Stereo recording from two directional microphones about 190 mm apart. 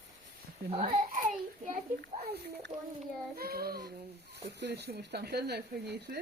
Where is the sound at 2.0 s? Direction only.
60° right (ahead or behind).